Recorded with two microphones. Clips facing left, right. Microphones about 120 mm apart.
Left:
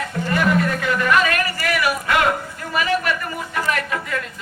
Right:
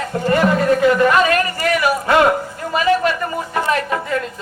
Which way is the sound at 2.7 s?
30° right (ahead or behind).